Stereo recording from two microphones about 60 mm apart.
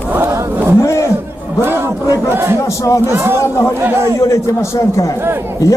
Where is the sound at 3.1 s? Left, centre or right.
Right.